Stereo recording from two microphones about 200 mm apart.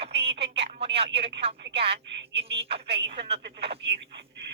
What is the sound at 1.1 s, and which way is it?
Speech, 60° right (ahead or behind).